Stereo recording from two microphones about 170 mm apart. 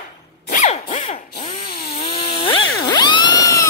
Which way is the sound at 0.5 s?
50° left (ahead or behind).